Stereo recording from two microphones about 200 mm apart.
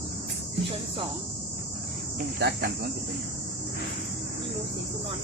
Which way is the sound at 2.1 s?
45° right (ahead or behind).